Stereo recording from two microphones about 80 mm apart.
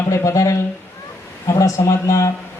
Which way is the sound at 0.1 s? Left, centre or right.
Left.